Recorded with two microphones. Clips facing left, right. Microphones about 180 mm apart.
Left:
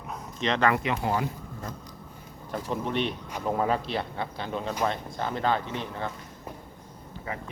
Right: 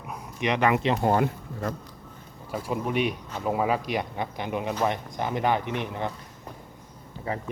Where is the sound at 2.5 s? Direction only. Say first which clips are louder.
Right 2 dB; 10° right (ahead or behind).